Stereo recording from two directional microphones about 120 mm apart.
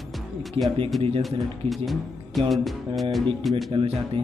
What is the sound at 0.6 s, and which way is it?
Speech, 45° right (ahead or behind).